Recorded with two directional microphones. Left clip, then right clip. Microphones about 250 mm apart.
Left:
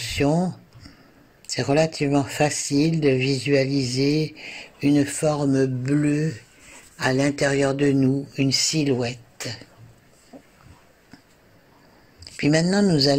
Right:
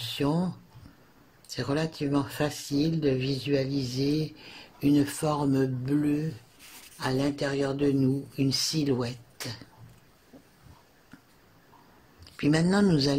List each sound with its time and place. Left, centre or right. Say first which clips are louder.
0.0 s a sound: left 7 dB; centre
1.5 s speech: left 10 dB; centre
4.3 s speech: left 9 dB; right
4.7 s speech: left 4 dB; centre
8.4 s speech: left 6 dB; centre
12.4 s speech: left 5 dB; centre